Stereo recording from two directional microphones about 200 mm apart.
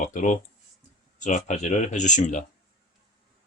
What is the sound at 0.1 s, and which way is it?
Speech, 40° left (ahead or behind).